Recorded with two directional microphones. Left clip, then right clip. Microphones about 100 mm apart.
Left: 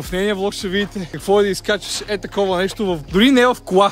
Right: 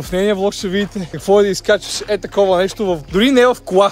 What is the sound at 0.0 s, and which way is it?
Speech, 15° left (ahead or behind).